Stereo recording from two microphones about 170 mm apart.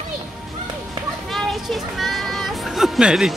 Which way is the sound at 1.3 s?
Centre (ahead or behind).